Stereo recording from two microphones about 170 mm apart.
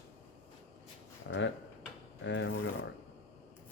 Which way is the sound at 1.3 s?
90° left.